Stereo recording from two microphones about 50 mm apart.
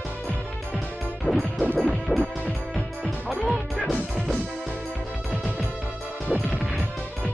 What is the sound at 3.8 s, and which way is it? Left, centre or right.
Music, centre.